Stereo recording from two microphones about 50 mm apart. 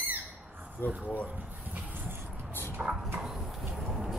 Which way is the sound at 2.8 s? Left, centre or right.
Right.